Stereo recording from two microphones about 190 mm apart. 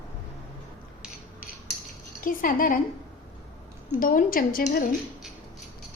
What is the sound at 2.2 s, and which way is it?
Speech, 45° left (ahead or behind).